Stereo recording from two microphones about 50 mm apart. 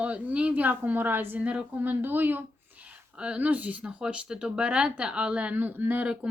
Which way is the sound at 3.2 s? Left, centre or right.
Right.